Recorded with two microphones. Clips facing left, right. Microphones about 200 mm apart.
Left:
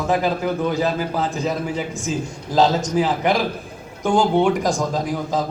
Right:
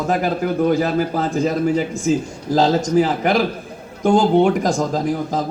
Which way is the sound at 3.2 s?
50° right (ahead or behind).